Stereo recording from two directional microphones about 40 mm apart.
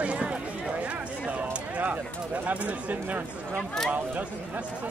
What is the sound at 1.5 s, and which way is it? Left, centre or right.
Speech, right.